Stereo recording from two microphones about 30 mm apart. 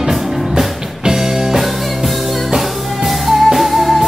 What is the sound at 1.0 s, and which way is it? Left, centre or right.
Music, centre.